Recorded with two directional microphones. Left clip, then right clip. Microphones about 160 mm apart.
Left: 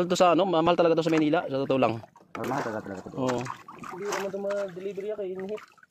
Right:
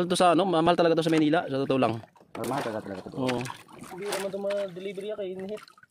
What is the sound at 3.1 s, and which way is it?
Speech, 35° right (ahead or behind).